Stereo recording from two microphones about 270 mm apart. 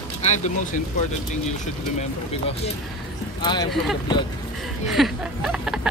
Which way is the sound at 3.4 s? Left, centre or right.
Centre.